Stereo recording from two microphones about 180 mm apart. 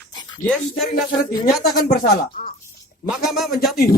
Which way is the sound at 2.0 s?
50° left (ahead or behind).